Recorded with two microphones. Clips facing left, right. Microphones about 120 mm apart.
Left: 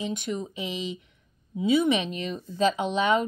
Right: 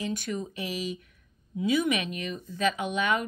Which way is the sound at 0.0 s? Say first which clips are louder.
Left 1 dB; 20° left (ahead or behind).